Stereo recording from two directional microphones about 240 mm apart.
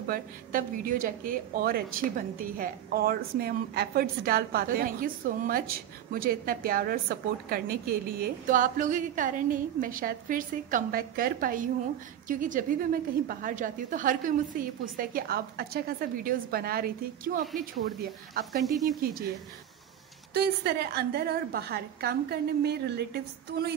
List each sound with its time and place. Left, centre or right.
0.1 s a woman's voice: right
20.3 s a woman's voice: right